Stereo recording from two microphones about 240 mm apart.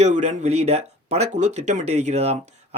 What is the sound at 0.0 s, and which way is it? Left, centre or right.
Speech, right.